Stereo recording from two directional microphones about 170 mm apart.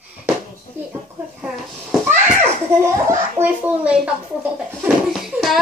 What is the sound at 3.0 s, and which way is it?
A child's voice, 10° right (ahead or behind).